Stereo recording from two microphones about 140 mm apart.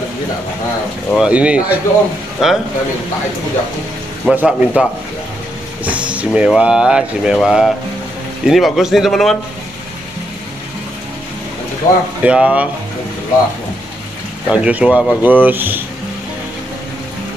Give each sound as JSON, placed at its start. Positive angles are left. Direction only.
{"t": 1.1, "sound": "a man's voice", "side_deg": -5}
{"t": 4.3, "sound": "speech", "side_deg": -10}
{"t": 5.9, "sound": "a man's voice", "side_deg": -10}
{"t": 11.8, "sound": "speech", "side_deg": 25}
{"t": 12.2, "sound": "speech", "side_deg": -5}
{"t": 14.5, "sound": "speech", "side_deg": -10}